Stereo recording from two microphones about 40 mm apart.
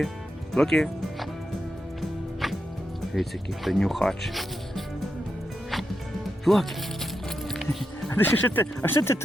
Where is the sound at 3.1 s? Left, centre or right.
Centre.